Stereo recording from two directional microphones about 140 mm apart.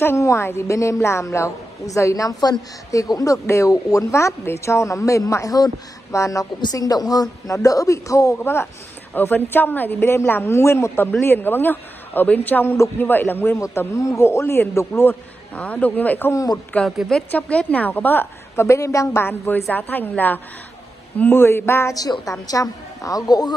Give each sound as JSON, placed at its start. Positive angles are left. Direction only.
{"t": 0.0, "sound": "a man's voice", "side_deg": 20}
{"t": 16.7, "sound": "a man's voice", "side_deg": 5}